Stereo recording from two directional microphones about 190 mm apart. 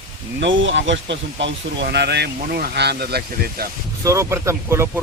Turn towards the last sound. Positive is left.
turn(degrees=-15)  # may be behind; listen again after turning